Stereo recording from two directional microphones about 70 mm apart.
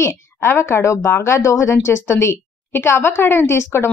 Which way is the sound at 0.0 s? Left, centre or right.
Left.